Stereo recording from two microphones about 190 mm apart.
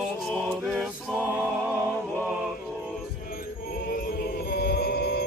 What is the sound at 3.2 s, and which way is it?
Chant, 50° left (ahead or behind).